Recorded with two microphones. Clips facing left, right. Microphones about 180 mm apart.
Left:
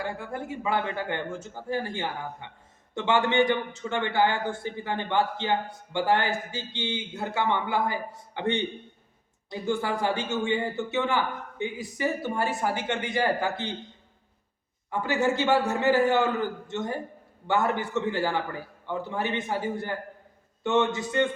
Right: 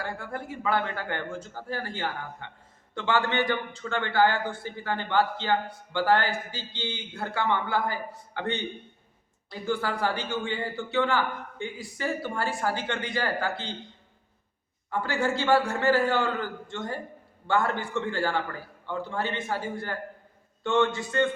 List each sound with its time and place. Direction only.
0.0 s a man's voice: 20° left (ahead or behind)
14.8 s a man's voice: 20° left (ahead or behind)